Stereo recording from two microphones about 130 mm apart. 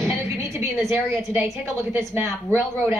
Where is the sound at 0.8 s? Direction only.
20° right (ahead or behind).